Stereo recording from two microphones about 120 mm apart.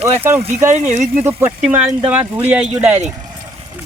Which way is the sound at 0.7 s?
80° right.